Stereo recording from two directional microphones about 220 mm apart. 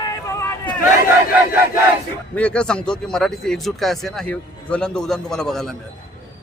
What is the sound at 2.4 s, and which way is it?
Speech, 5° left (ahead or behind).